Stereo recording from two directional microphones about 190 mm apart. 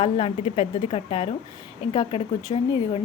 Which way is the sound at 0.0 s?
30° left (ahead or behind).